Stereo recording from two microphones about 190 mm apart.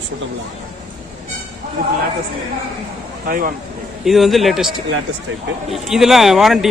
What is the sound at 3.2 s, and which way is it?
Speech, 50° right (ahead or behind).